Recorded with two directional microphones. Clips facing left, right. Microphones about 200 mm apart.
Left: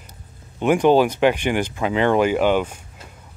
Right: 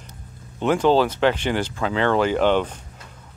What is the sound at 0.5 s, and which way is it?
Speech, 15° left (ahead or behind).